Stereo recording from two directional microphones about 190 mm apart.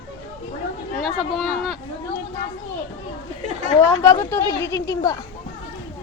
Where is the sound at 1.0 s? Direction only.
Centre (ahead or behind).